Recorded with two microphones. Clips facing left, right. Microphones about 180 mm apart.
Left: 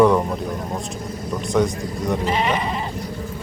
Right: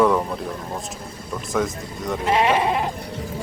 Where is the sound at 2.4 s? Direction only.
65° right (ahead or behind).